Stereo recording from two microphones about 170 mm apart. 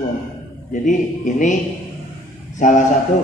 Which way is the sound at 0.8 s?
50° left (ahead or behind).